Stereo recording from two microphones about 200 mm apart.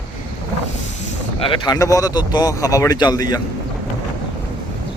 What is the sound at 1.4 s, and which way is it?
Speech, 25° left (ahead or behind).